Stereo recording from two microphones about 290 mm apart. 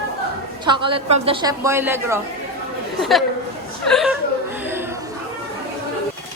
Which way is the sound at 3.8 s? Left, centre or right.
Centre.